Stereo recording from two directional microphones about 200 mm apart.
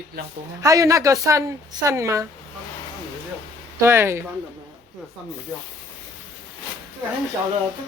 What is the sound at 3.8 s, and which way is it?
Speech, 10° right (ahead or behind).